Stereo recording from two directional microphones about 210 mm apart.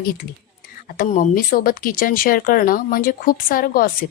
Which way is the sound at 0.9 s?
40° left (ahead or behind).